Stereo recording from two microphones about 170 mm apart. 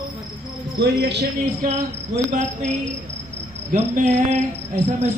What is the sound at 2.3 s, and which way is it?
Cricket, 45° right (ahead or behind).